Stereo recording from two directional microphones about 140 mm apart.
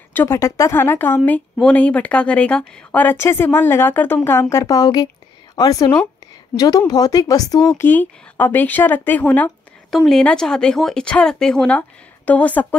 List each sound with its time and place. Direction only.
0.1 s a woman's voice: 15° left (ahead or behind)